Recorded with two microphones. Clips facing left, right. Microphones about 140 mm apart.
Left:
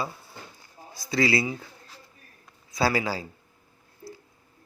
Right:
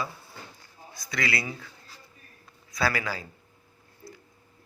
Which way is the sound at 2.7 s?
25° left (ahead or behind).